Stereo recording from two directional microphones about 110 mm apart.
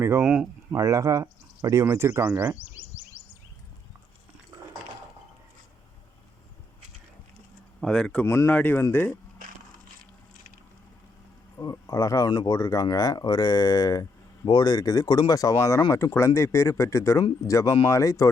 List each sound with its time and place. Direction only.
0.0 s speech: 20° right (ahead or behind)
7.8 s speech: 5° left (ahead or behind)
8.2 s speech: 20° left (ahead or behind)
11.5 s speech: 35° left (ahead or behind)